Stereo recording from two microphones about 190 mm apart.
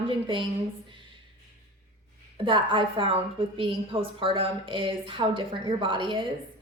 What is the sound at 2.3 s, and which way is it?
A woman's voice, 25° right (ahead or behind).